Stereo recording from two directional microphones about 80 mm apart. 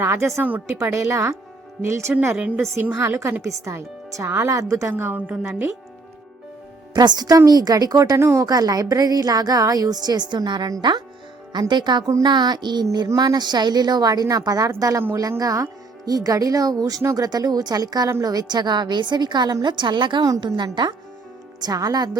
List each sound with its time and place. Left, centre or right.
0.0 s speech: right
0.4 s speech: right
0.9 s speech: right; by 5.5 s centre
5.5 s speech: right
6.9 s a woman's voice: right
8.4 s a woman's voice: right
17.2 s a woman's voice: right
21.6 s a woman's voice: right